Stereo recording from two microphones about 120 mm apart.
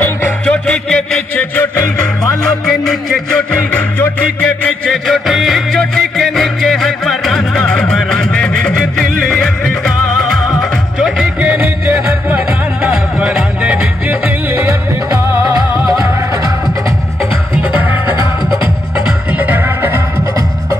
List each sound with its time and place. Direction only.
0.0 s music: 10° left (ahead or behind)
3.7 s music: 10° left (ahead or behind)
11.5 s music: 20° right (ahead or behind)
19.3 s music: 15° right (ahead or behind)